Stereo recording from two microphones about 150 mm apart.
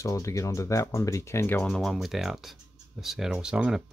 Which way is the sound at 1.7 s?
Centre (ahead or behind).